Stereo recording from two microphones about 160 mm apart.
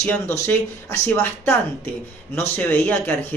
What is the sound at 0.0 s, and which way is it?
Speech, 15° left (ahead or behind).